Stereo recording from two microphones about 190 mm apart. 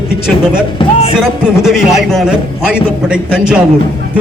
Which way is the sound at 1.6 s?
Centre (ahead or behind).